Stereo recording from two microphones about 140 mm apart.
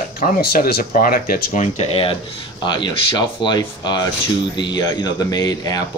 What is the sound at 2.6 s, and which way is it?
Speech, 35° left (ahead or behind).